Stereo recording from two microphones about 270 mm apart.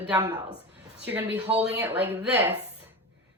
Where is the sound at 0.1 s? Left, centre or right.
Centre.